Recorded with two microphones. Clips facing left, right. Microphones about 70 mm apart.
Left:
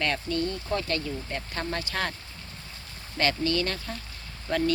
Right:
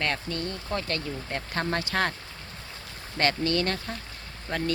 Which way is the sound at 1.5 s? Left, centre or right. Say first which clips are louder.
Right 4 dB; right.